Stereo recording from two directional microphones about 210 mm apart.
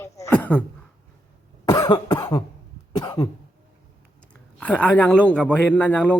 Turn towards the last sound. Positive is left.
turn(degrees=5)  # may be behind; listen again after turning